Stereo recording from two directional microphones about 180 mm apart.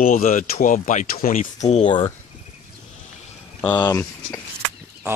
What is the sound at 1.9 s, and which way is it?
Speech, 25° left (ahead or behind).